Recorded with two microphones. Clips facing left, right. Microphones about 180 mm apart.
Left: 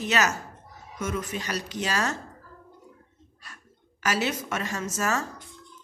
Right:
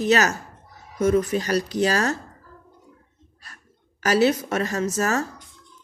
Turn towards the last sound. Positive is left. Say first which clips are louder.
# right 5 dB
turn(degrees=-35)  # may be behind; listen again after turning